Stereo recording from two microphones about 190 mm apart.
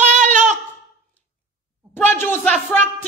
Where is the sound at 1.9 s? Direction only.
10° left (ahead or behind).